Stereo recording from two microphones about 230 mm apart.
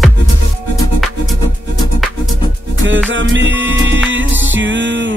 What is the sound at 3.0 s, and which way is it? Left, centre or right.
Music, right.